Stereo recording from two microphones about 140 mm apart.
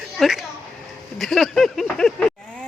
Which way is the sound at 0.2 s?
5° right (ahead or behind).